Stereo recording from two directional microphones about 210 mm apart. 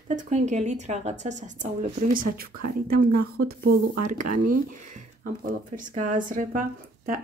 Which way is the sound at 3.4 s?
45° right (ahead or behind).